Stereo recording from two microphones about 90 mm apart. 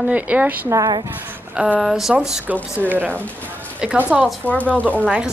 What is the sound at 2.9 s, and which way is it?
Speech, 20° right (ahead or behind).